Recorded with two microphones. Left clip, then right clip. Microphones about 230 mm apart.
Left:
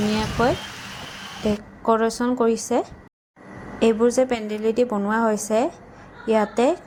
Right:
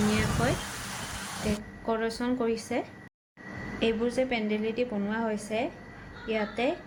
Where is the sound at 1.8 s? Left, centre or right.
Left.